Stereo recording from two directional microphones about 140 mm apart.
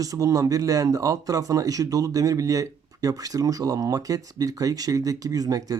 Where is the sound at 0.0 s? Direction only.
25° right (ahead or behind).